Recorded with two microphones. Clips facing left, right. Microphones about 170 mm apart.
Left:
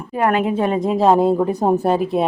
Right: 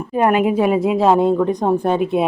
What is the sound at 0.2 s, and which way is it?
A woman's voice, 15° right (ahead or behind).